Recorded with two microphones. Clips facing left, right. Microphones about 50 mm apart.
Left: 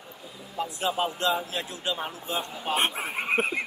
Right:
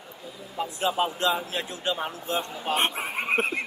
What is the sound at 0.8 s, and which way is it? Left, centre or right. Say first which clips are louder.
Speech: right 2 dB; right.